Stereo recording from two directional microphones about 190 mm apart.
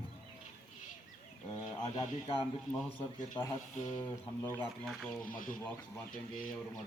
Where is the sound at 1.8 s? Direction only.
30° left (ahead or behind).